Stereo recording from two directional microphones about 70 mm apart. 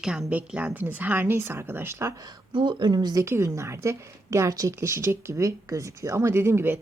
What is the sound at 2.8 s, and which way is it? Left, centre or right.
Speech, right.